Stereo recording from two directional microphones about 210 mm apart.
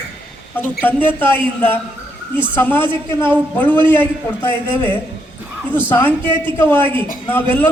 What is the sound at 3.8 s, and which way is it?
A man's voice, 10° left (ahead or behind).